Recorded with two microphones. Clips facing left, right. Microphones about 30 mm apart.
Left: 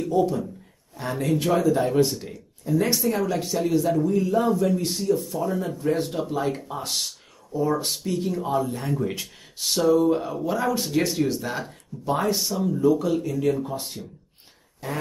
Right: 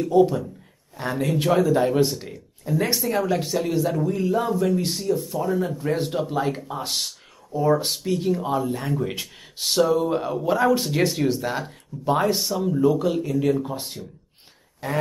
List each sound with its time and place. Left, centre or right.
0.1 s speech: right
12.6 s speech: centre